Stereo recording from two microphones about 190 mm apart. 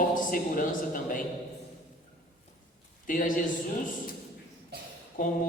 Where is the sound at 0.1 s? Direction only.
45° left (ahead or behind).